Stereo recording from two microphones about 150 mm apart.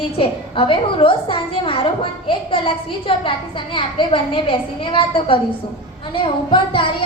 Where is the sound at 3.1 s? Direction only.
35° left (ahead or behind).